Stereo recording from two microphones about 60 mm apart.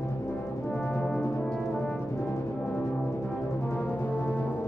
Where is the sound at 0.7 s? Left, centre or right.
Centre.